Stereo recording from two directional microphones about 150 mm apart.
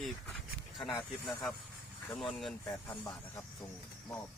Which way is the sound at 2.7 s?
20° left (ahead or behind).